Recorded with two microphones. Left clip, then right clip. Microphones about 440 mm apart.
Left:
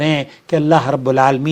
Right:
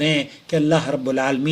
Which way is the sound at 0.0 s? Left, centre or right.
Left.